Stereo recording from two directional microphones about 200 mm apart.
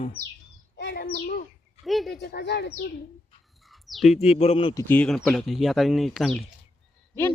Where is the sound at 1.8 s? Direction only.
Centre (ahead or behind).